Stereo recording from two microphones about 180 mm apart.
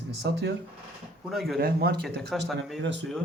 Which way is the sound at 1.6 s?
60° right (ahead or behind).